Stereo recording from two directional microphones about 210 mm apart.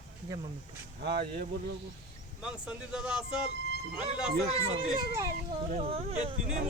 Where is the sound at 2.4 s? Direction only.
5° right (ahead or behind).